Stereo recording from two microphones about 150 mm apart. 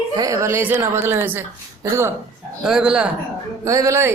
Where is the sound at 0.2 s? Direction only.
20° right (ahead or behind).